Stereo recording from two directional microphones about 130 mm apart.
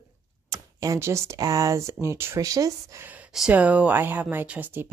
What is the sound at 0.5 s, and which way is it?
Speech, 25° right (ahead or behind).